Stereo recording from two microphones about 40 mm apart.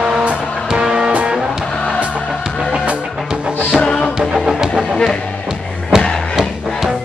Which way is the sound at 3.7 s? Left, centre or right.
Left.